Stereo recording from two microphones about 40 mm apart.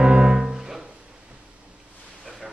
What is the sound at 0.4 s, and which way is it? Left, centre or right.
Music, centre.